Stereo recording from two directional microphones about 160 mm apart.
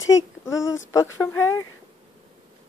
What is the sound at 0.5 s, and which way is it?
Speech, 20° left (ahead or behind).